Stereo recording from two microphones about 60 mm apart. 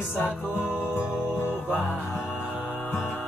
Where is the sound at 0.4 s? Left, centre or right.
Right.